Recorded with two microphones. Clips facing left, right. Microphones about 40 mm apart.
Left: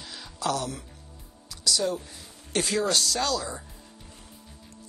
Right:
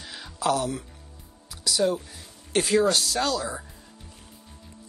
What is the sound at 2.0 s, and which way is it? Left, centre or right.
Speech, centre.